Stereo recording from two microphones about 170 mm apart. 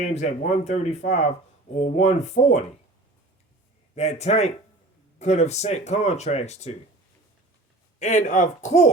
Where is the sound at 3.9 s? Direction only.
40° left (ahead or behind).